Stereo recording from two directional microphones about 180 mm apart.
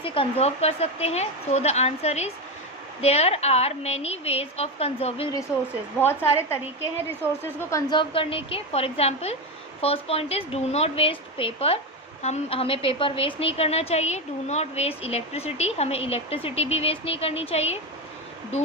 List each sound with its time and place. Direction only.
0.0 s a woman's voice: 30° left (ahead or behind)
7.7 s a woman's voice: 20° left (ahead or behind)